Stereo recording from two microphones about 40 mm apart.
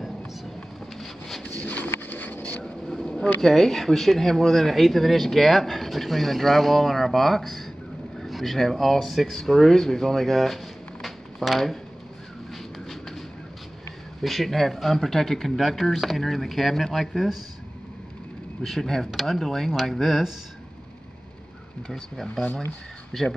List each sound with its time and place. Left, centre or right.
0.9 s wind noise: centre
1.4 s a sound: left
2.0 s a sound: left
2.6 s vehicle: centre
3.3 s speech: centre
14.2 s speech: centre
18.6 s speech: centre
21.8 s speech: centre